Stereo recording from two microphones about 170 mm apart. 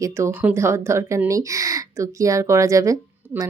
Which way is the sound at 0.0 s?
15° right (ahead or behind).